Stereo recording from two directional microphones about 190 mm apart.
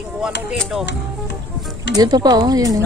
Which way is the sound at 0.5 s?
5° left (ahead or behind).